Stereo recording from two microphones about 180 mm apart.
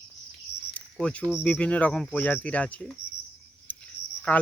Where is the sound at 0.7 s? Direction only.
5° left (ahead or behind).